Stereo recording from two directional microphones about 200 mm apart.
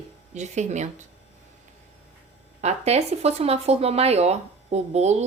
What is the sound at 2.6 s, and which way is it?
A woman's voice, 35° right (ahead or behind).